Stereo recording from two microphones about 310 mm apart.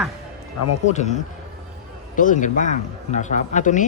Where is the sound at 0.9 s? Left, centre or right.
Left.